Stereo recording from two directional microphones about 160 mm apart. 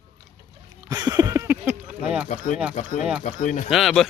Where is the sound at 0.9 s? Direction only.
25° right (ahead or behind).